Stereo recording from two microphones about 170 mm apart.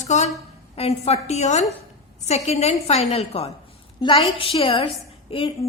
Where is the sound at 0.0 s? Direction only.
45° left (ahead or behind).